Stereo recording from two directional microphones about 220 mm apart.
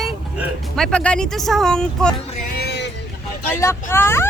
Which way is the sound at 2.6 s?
50° left (ahead or behind).